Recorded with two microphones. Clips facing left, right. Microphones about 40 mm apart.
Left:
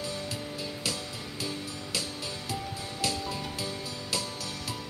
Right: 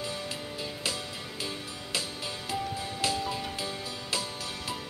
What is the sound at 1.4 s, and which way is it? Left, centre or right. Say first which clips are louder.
Music: left 2 dB; centre.